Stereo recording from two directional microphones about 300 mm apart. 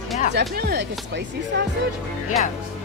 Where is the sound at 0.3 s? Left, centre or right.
Right.